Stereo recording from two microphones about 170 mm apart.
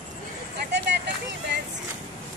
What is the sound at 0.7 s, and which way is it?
Vehicle, 85° right.